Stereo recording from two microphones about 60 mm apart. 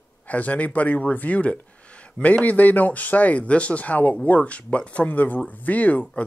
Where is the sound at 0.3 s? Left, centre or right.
Left.